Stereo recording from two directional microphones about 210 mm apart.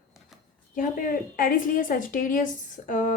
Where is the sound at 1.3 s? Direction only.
40° left (ahead or behind).